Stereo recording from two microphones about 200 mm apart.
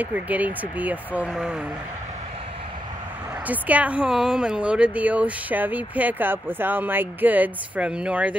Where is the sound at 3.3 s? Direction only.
10° right (ahead or behind).